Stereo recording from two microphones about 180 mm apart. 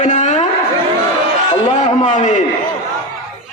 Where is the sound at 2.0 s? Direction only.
40° left (ahead or behind).